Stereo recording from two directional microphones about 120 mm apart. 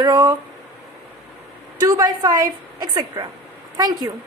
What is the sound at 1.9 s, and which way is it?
A woman's voice, 30° right (ahead or behind).